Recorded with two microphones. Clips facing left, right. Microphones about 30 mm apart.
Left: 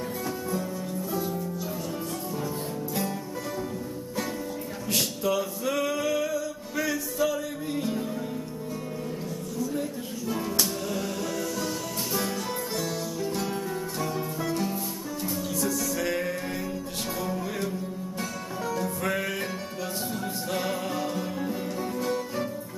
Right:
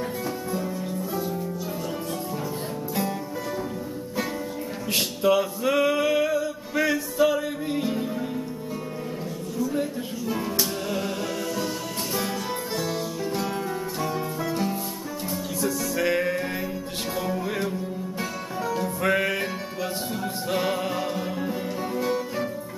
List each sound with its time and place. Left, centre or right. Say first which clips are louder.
4.9 s male singing: right 5 dB; right
9.8 s music: right 4 dB; centre
12.7 s music: right 2 dB; centre
16.0 s music: right 8 dB; right
18.7 s music: right 5 dB; right
20.5 s music: right 4 dB; centre